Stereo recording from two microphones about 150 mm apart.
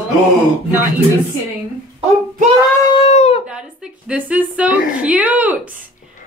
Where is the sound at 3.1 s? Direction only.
45° left (ahead or behind).